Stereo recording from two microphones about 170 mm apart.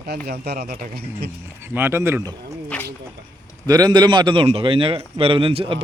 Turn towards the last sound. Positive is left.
turn(degrees=-35)  # may be behind; listen again after turning